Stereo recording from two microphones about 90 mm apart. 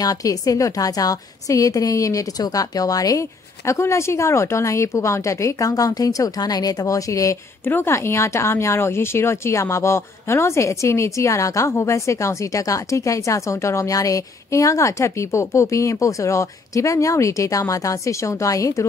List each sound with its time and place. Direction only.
0.0 s speech: 40° left (ahead or behind)
7.6 s speech: 25° left (ahead or behind)